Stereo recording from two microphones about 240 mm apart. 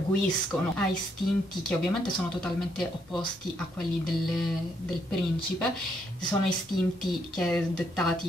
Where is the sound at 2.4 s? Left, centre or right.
Centre.